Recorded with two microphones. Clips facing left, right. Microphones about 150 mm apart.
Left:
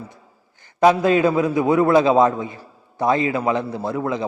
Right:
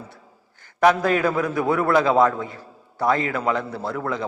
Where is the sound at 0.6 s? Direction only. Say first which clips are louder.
Left 2 dB; 20° left (ahead or behind).